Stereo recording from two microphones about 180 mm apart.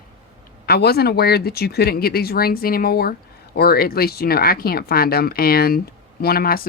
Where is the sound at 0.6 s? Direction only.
60° left (ahead or behind).